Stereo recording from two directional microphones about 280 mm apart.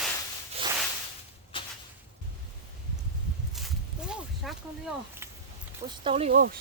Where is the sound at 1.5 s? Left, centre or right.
Centre.